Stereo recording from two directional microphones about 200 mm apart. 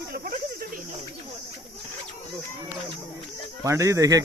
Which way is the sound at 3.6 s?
15° right (ahead or behind).